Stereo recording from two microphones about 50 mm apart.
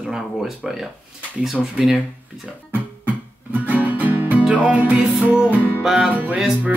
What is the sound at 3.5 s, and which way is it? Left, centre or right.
Music, right.